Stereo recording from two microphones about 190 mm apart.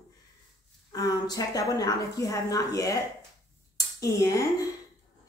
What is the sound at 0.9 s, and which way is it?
A woman's voice, 20° left (ahead or behind).